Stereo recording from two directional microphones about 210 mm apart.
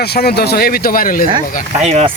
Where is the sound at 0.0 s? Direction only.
50° left (ahead or behind).